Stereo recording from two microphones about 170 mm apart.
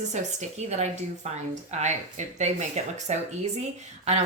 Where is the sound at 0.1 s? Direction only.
40° right (ahead or behind).